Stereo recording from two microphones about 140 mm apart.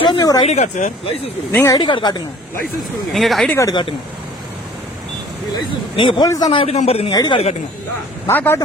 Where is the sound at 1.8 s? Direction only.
35° left (ahead or behind).